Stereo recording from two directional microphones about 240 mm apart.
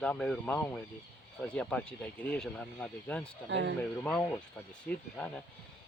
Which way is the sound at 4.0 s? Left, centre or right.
Centre.